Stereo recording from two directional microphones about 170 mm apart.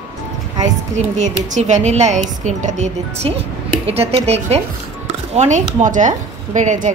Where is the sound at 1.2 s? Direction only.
45° right (ahead or behind).